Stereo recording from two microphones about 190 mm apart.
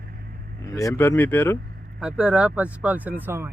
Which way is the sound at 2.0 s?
5° right (ahead or behind).